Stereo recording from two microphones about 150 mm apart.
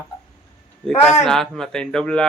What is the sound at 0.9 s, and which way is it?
Speech, 50° left (ahead or behind).